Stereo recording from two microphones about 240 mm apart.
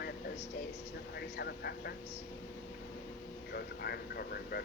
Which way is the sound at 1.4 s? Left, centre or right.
Left.